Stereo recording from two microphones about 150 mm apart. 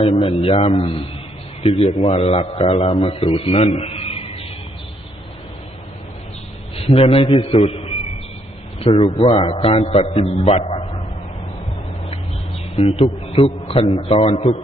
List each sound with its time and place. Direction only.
0.0 s a man's voice: 40° left (ahead or behind)
6.7 s a man's voice: 40° left (ahead or behind)
7.3 s a man's voice: 30° left (ahead or behind)
7.5 s a sound: 40° left (ahead or behind)
8.8 s a man's voice: 40° left (ahead or behind)
10.4 s a sound: 45° left (ahead or behind)
12.8 s a man's voice: 50° left (ahead or behind)
13.4 s a man's voice: 40° left (ahead or behind)